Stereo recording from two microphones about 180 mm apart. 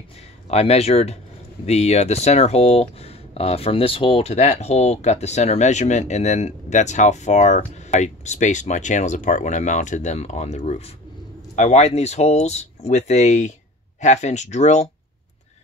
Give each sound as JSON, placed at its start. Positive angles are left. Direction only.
{"t": 0.5, "sound": "speech", "side_deg": 35}